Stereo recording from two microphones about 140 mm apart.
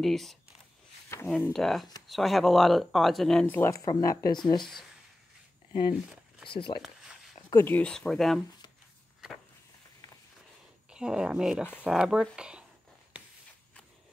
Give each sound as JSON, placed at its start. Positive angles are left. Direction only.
{"t": 0.0, "sound": "speech", "side_deg": 0}
{"t": 1.5, "sound": "speech", "side_deg": 0}
{"t": 3.5, "sound": "speech", "side_deg": 15}
{"t": 5.7, "sound": "speech", "side_deg": 35}
{"t": 6.8, "sound": "a sound", "side_deg": -5}
{"t": 7.5, "sound": "speech", "side_deg": 15}
{"t": 10.9, "sound": "speech", "side_deg": -5}
{"t": 13.1, "sound": "a sound", "side_deg": -10}